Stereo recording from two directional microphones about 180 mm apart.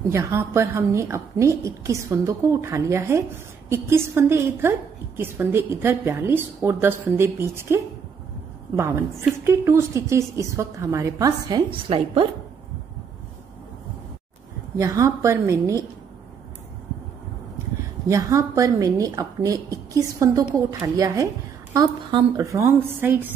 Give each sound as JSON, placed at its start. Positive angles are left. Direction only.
{"t": 0.1, "sound": "a woman's voice", "side_deg": -15}
{"t": 14.8, "sound": "a woman's voice", "side_deg": -15}
{"t": 18.0, "sound": "a woman's voice", "side_deg": -15}